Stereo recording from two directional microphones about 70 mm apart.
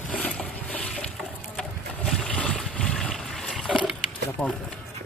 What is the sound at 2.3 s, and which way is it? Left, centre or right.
Vehicle, centre.